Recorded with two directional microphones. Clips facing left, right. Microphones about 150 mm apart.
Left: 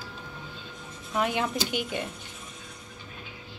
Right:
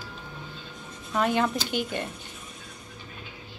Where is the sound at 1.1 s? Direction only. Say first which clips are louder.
Right 3 dB; 10° left (ahead or behind).